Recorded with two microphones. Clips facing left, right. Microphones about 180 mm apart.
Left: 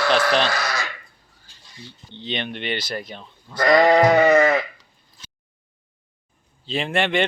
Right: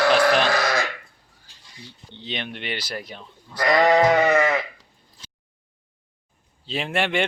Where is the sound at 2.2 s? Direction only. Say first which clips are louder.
Left 4 dB; 5° right (ahead or behind).